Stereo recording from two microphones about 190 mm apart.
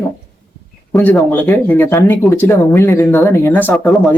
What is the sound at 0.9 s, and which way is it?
Speech, 5° left (ahead or behind).